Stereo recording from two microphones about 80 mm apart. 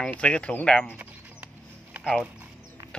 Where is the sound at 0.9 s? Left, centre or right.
Right.